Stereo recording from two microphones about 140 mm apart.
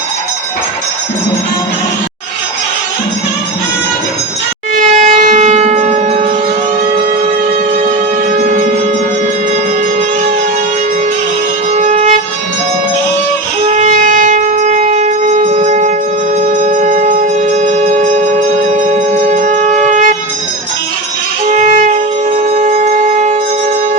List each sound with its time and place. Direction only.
4.7 s train: 70° right (ahead or behind)
11.8 s music: 55° right (ahead or behind)
13.7 s shofar: 55° right (ahead or behind)
16.7 s music: 60° right (ahead or behind)
19.3 s shofar: 60° right (ahead or behind)
21.5 s music: 65° right (ahead or behind)
22.6 s shofar: 65° right (ahead or behind)